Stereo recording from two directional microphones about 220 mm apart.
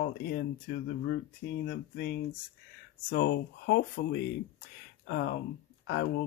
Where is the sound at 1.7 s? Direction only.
45° left (ahead or behind).